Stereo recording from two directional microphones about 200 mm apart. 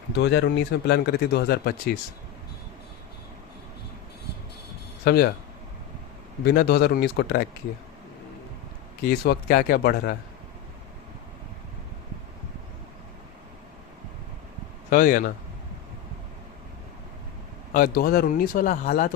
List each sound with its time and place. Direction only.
0.2 s speech: 60° left (ahead or behind)
5.0 s speech: 50° left (ahead or behind)
6.4 s speech: 55° left (ahead or behind)
9.0 s speech: 45° left (ahead or behind)
14.8 s speech: 45° left (ahead or behind)
17.7 s speech: 50° left (ahead or behind)